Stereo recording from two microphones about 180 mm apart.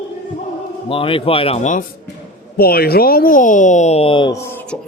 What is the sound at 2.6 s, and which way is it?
Speech, 60° left (ahead or behind).